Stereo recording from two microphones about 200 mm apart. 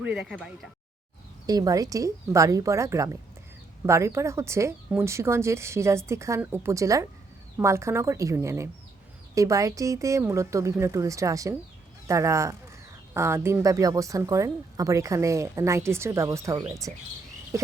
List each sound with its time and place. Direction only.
0.0 s speech: 5° right (ahead or behind)
1.5 s speech: 20° right (ahead or behind)